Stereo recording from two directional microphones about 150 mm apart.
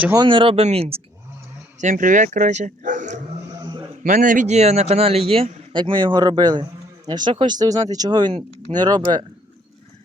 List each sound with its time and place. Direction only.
0.2 s a man's voice: 35° right (ahead or behind)
1.8 s speech: 60° right (ahead or behind)
3.6 s a sound: 30° right (ahead or behind)
4.0 s a man's voice: 60° right (ahead or behind); by 9.2 s 30° right (ahead or behind)